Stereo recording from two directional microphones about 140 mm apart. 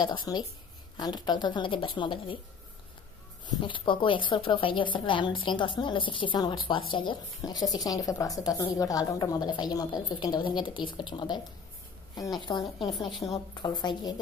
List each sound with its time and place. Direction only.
0.0 s speech: 30° left (ahead or behind)
3.6 s speech: 35° left (ahead or behind)
13.2 s a woman's voice: 25° left (ahead or behind)